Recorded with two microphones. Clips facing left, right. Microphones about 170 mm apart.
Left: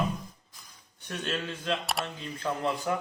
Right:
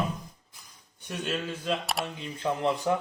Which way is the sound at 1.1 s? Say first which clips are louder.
Right 1 dB; 5° right (ahead or behind).